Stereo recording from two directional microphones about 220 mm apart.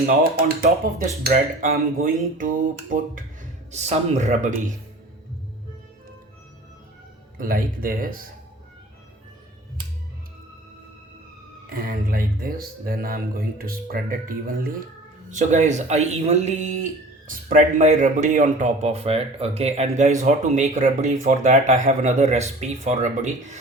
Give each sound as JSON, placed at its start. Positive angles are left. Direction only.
{"t": 0.0, "sound": "speech", "side_deg": -45}
{"t": 7.3, "sound": "speech", "side_deg": -40}
{"t": 11.7, "sound": "speech", "side_deg": -40}